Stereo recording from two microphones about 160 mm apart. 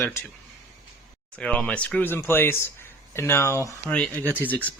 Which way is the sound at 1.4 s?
5° left (ahead or behind).